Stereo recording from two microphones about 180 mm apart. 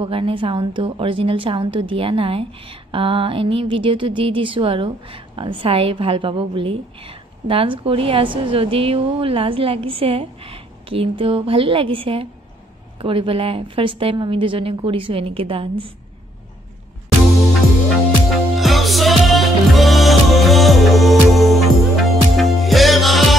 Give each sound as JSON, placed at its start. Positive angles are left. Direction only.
{"t": 0.0, "sound": "a woman's voice", "side_deg": -30}
{"t": 18.6, "sound": "music", "side_deg": 0}